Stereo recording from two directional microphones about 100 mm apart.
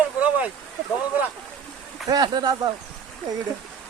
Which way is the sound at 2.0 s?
40° right (ahead or behind).